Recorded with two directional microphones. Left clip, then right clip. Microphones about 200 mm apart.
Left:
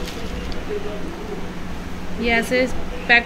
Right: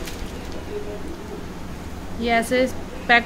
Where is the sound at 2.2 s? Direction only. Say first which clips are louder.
Left 1 dB; 20° right (ahead or behind).